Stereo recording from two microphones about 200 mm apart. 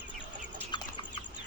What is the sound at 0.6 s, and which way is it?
Bird, 20° left (ahead or behind).